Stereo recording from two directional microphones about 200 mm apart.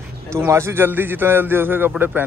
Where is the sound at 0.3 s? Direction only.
15° right (ahead or behind).